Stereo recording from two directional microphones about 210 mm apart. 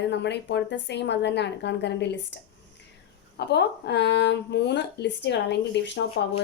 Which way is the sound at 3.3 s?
55° left (ahead or behind).